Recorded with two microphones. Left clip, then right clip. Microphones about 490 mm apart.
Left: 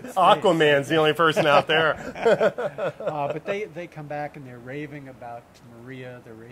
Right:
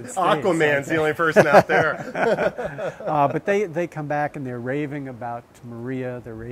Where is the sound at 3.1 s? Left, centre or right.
Right.